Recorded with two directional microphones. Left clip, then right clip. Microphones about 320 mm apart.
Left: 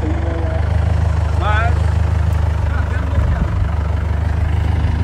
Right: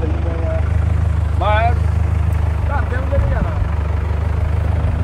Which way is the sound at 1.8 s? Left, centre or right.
Centre.